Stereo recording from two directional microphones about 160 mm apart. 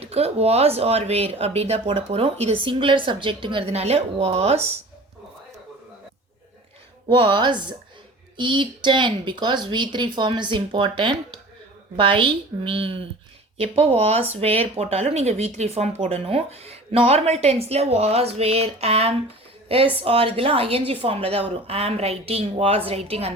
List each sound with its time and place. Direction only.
0.0 s speech: 40° right (ahead or behind)
7.1 s a woman's voice: 30° right (ahead or behind)